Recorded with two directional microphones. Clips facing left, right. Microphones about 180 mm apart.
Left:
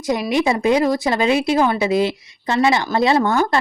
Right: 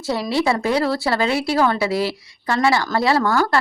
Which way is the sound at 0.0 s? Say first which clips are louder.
Left 2 dB; 15° left (ahead or behind).